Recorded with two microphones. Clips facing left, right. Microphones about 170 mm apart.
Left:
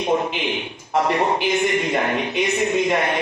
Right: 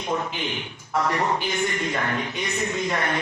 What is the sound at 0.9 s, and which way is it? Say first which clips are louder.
A man's voice: left 4 dB; 20° left (ahead or behind).